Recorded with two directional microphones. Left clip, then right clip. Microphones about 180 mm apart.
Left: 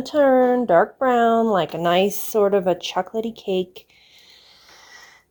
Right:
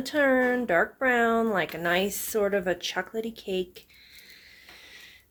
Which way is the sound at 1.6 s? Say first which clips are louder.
Left 8 dB; 30° left (ahead or behind).